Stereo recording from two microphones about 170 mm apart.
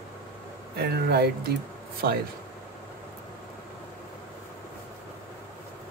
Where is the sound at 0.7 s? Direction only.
65° right (ahead or behind).